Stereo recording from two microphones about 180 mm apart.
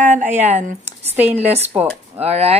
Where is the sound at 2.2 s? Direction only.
35° right (ahead or behind).